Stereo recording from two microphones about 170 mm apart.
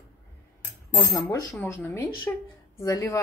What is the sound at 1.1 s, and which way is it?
Speech, 20° left (ahead or behind).